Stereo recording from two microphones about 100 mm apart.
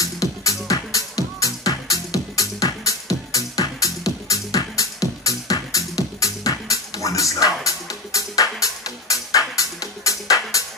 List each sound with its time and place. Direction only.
0.0 s music: 35° left (ahead or behind)